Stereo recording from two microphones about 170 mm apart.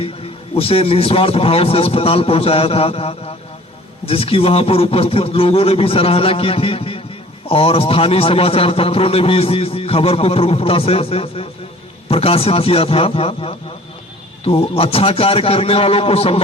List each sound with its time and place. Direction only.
0.0 s a man's voice: 35° left (ahead or behind)